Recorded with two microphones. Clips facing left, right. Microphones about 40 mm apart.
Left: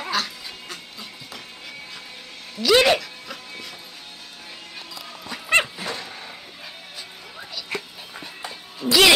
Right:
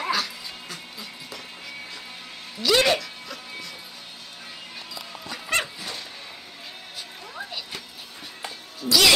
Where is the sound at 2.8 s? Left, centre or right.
Centre.